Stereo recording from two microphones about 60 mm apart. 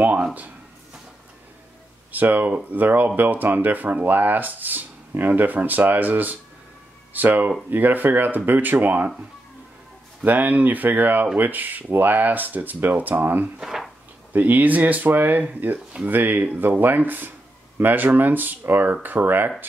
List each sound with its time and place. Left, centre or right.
2.1 s speech: right
10.2 s speech: right
13.6 s speech: centre
14.3 s speech: right